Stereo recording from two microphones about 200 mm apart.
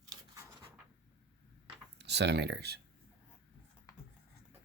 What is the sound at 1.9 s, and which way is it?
Speech, 60° right (ahead or behind).